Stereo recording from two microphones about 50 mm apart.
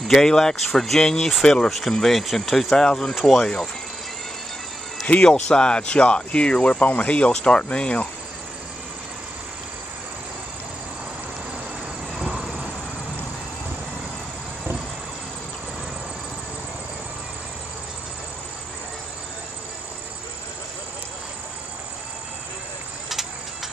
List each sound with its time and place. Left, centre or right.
0.1 s speech: centre
5.0 s speech: left
5.3 s speech: centre